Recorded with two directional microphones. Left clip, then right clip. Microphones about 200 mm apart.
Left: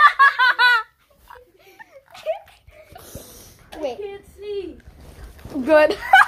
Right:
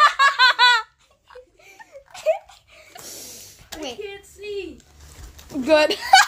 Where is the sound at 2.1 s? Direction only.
25° right (ahead or behind).